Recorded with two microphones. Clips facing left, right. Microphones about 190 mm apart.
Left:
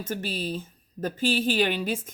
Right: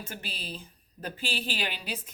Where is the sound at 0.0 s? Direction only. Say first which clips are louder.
Left 10 dB; 45° left (ahead or behind).